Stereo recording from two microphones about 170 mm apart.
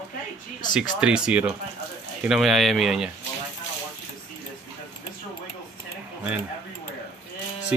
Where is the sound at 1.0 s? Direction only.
5° right (ahead or behind).